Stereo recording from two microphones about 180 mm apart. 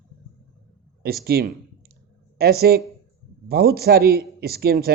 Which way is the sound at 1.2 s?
60° right (ahead or behind).